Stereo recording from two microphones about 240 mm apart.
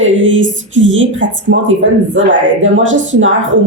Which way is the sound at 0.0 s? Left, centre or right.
Right.